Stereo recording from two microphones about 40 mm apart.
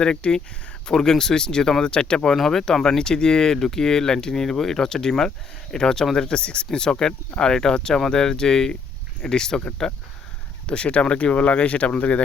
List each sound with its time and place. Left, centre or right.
0.0 s speech: left
2.3 s speech: centre
10.7 s speech: left